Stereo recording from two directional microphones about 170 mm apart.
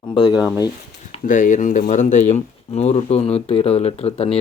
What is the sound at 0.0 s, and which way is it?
Speech, 25° left (ahead or behind).